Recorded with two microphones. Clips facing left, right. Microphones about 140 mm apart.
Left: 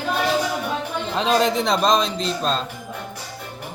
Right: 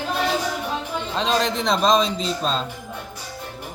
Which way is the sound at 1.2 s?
5° left (ahead or behind).